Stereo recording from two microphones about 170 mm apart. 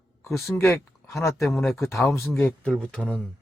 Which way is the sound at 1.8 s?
15° left (ahead or behind).